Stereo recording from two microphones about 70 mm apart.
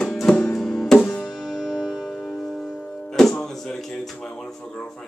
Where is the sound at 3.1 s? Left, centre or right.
Centre.